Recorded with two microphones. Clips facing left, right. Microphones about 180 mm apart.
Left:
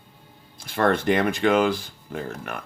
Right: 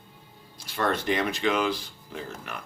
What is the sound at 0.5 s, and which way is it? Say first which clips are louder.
Speech: left 6 dB; 55° left (ahead or behind).